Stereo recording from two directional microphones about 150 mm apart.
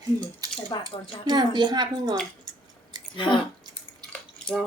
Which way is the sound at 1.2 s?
30° right (ahead or behind).